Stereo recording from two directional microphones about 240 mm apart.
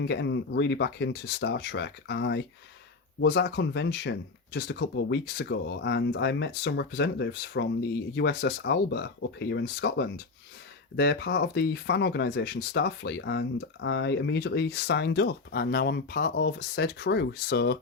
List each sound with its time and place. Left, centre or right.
0.0 s speech: left